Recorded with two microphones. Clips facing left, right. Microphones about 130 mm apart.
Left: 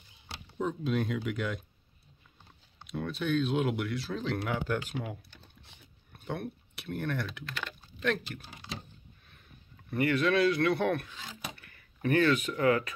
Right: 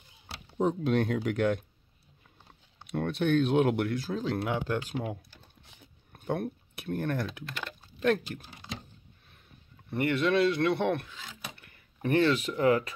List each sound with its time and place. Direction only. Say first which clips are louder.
0.7 s speech: right 4 dB; 65° right (ahead or behind)
2.9 s speech: right 4 dB; 65° right (ahead or behind); by 5.1 s 35° right (ahead or behind)
6.1 s speech: right 5 dB; 40° right (ahead or behind)
9.8 s speech: even; 25° right (ahead or behind)
11.1 s speech: left 1 dB; centre (ahead or behind)
11.5 s speech: even; 25° right (ahead or behind)